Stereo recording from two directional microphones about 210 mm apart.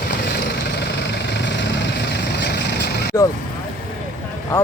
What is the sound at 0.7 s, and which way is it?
Vehicle, 55° left (ahead or behind).